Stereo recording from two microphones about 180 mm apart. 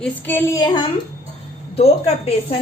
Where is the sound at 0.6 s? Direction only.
25° left (ahead or behind).